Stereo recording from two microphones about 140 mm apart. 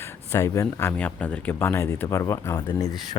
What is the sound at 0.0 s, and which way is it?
A man's voice, 20° left (ahead or behind).